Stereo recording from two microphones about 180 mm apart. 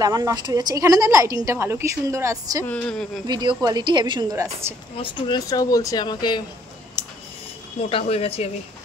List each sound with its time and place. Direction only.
0.0 s a woman's voice: 20° right (ahead or behind)
2.6 s speech: 5° left (ahead or behind)
3.3 s a woman's voice: 25° right (ahead or behind)
4.9 s speech: 25° left (ahead or behind)
7.9 s speech: 35° left (ahead or behind)